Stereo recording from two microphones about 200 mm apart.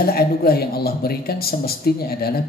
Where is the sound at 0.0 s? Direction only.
50° left (ahead or behind).